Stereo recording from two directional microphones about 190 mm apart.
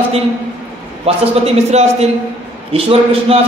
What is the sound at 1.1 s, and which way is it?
A man's voice, 30° right (ahead or behind).